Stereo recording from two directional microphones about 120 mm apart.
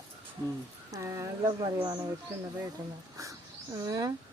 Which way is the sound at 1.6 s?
40° right (ahead or behind).